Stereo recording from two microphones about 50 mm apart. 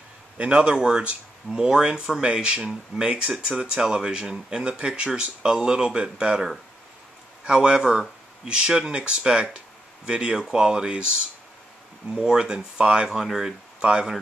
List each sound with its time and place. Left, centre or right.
0.4 s speech: right
7.4 s speech: centre
13.1 s speech: centre
13.7 s speech: centre